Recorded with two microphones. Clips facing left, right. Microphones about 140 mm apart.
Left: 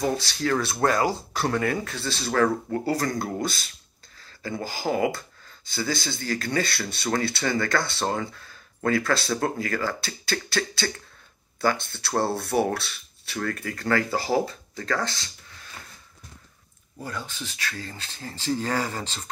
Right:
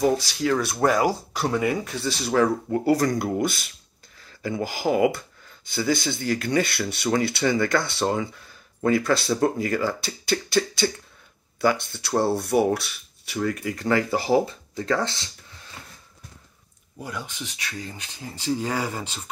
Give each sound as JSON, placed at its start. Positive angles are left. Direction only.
{"t": 0.0, "sound": "speech", "side_deg": -10}
{"t": 17.0, "sound": "speech", "side_deg": -15}